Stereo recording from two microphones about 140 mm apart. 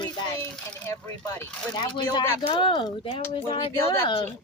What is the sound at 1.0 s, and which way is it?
Speech, 15° left (ahead or behind).